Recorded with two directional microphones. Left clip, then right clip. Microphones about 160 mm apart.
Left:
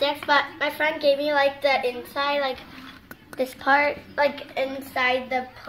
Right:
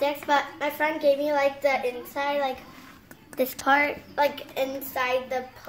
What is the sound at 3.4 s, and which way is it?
A woman's voice, 65° right (ahead or behind).